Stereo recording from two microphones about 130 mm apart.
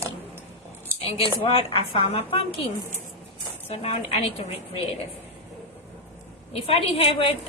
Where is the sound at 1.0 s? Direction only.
45° left (ahead or behind).